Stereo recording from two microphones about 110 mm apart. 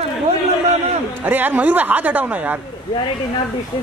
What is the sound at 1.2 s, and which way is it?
A man's voice, 15° right (ahead or behind).